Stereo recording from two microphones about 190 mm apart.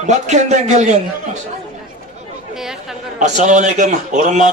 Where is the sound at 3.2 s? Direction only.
40° right (ahead or behind).